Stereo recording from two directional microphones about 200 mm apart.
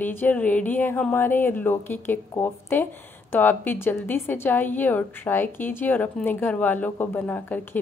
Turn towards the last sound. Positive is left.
turn(degrees=10)  # may be behind; listen again after turning